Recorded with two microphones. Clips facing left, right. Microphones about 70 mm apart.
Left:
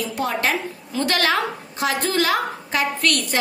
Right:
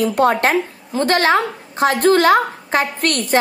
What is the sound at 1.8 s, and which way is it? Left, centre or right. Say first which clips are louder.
A woman's voice: right 8 dB; right.